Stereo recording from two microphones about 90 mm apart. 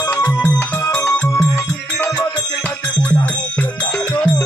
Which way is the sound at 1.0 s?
35° left (ahead or behind).